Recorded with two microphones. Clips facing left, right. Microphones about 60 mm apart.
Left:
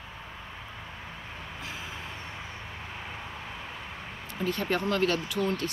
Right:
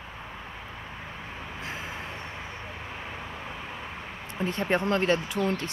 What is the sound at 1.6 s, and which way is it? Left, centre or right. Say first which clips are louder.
Vehicle: right 4 dB; right.